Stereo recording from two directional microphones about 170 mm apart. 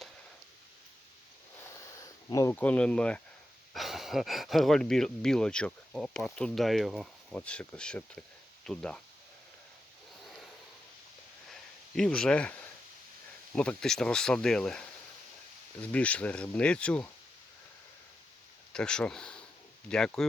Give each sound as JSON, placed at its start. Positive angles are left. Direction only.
{"t": 2.0, "sound": "speech", "side_deg": 20}
{"t": 11.9, "sound": "speech", "side_deg": 5}
{"t": 18.7, "sound": "speech", "side_deg": 5}